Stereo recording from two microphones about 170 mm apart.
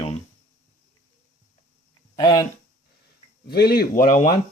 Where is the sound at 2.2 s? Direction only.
20° left (ahead or behind).